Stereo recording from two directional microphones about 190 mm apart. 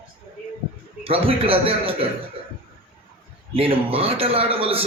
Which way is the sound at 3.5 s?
30° right (ahead or behind).